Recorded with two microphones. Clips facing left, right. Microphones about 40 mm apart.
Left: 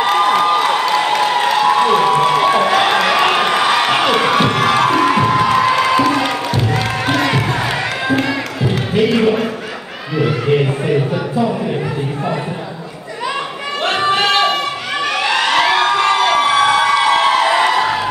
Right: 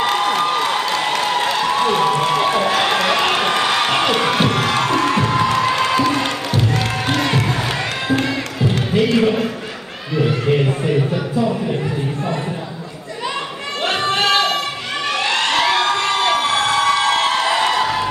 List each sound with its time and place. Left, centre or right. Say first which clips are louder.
0.0 s a sound: left 4 dB; centre
3.1 s crowd: left 3 dB; centre
5.7 s music: left 3 dB; centre
10.2 s a sound: left 2 dB; centre
14.1 s singing: left 1 dB; centre
15.4 s crowd: left 3 dB; left
17.0 s music: left 4 dB; left
17.7 s music: left 3 dB; centre